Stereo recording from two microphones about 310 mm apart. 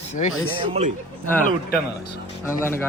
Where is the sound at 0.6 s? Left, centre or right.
Centre.